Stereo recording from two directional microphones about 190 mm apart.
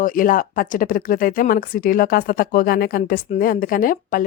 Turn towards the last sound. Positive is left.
turn(degrees=45)  # may be behind; listen again after turning